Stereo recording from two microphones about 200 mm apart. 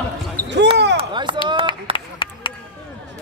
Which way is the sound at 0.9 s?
25° right (ahead or behind).